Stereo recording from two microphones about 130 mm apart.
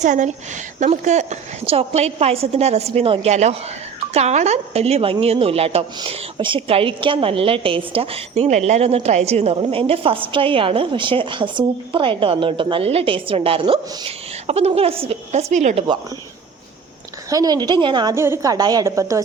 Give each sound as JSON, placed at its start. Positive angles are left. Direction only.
{"t": 0.0, "sound": "a woman's voice", "side_deg": -70}
{"t": 6.0, "sound": "a woman's voice", "side_deg": -40}
{"t": 8.4, "sound": "a woman's voice", "side_deg": -60}
{"t": 17.2, "sound": "a woman's voice", "side_deg": -30}
{"t": 18.1, "sound": "a woman's voice", "side_deg": -20}